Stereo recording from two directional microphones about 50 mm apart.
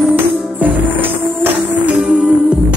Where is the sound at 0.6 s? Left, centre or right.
Right.